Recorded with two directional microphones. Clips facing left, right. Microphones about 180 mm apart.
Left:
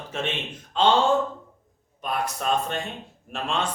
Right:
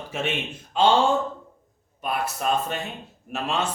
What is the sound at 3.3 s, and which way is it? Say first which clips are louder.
Speech: right 1 dB; 5° right (ahead or behind).